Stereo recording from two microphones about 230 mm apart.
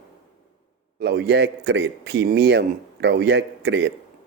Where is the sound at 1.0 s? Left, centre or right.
Right.